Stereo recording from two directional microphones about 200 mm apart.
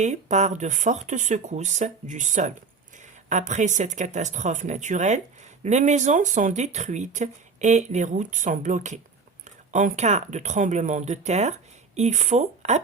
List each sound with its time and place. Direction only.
0.0 s speech: 35° right (ahead or behind)